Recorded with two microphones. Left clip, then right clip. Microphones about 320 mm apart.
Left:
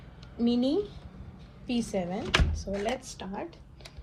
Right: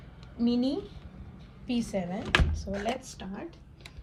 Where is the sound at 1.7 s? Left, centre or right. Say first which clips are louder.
Left 1 dB; centre.